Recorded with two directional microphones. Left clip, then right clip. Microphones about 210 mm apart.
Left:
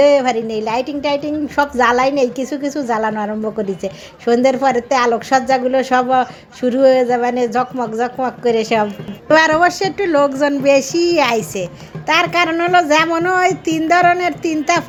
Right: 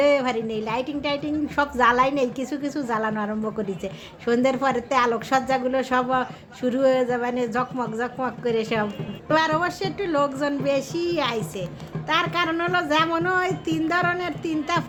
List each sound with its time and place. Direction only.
0.0 s a woman's voice: 15° left (ahead or behind)